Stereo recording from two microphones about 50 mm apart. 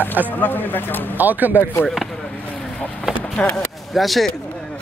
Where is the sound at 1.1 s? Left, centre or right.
Right.